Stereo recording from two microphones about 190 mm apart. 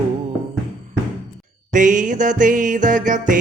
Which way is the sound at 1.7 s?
40° right (ahead or behind).